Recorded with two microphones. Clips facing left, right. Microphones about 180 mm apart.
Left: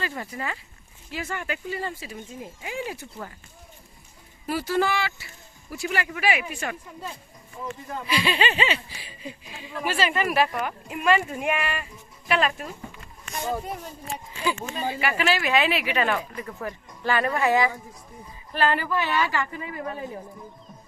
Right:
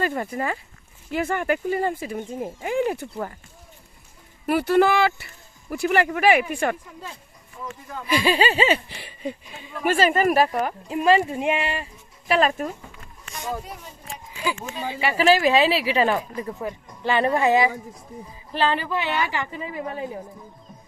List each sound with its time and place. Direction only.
0.0 s speech: 50° right (ahead or behind)
4.4 s speech: 60° right (ahead or behind)
8.1 s speech: 40° right (ahead or behind)
8.9 s speech: 60° right (ahead or behind)
9.8 s speech: 45° right (ahead or behind); by 11.9 s 25° right (ahead or behind)
12.3 s speech: 40° right (ahead or behind)
15.2 s speech: 35° right (ahead or behind)
16.6 s speech: 20° right (ahead or behind)